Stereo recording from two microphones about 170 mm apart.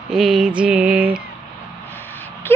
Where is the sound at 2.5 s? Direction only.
15° left (ahead or behind).